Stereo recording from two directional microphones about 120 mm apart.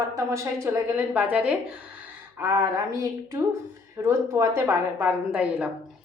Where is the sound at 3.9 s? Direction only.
20° right (ahead or behind).